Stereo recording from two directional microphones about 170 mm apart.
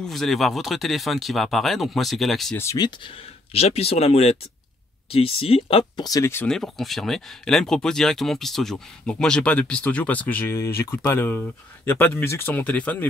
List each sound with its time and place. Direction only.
0.0 s speech: centre (ahead or behind)
2.5 s speech: 15° left (ahead or behind)
3.5 s speech: 35° left (ahead or behind)
6.0 s speech: 20° left (ahead or behind)
6.4 s speech: centre (ahead or behind)